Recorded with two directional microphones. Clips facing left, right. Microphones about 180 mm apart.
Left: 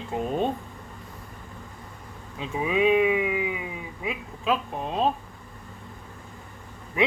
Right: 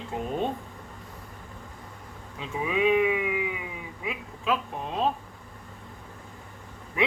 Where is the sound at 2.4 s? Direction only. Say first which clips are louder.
Left 2 dB; 25° left (ahead or behind).